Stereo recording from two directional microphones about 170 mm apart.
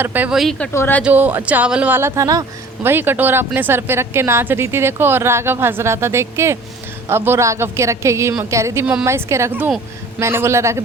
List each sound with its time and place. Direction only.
0.0 s speech: 10° right (ahead or behind)
0.7 s speech: 15° left (ahead or behind)
1.0 s speech: 10° right (ahead or behind)